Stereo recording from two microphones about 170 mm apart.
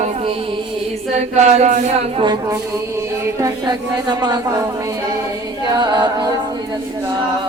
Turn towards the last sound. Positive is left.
turn(degrees=-25)  # may be behind; listen again after turning